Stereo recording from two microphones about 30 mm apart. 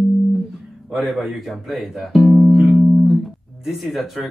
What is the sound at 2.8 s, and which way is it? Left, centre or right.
Music, centre.